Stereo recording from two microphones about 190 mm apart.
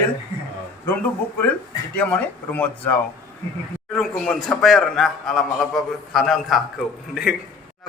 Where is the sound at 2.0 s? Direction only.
10° left (ahead or behind).